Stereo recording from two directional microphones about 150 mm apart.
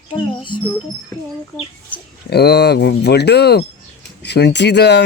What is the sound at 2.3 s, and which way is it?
Speech, 90° left.